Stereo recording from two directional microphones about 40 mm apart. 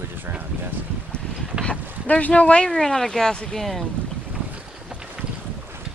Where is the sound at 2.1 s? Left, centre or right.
Left.